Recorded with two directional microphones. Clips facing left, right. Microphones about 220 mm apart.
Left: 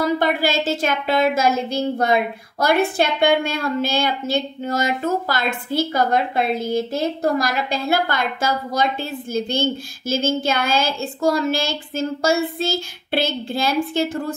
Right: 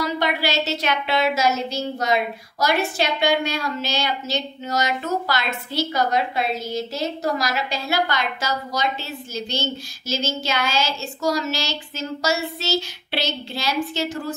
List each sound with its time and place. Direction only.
0.0 s a woman's voice: 50° left (ahead or behind)